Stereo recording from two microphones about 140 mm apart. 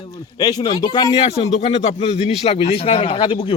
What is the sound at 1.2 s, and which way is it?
A man's voice, 50° left (ahead or behind).